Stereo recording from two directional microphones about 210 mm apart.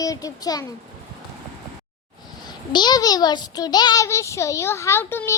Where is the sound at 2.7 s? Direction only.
20° left (ahead or behind).